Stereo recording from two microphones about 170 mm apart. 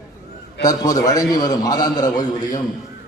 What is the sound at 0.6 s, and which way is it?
A man's voice, 20° left (ahead or behind).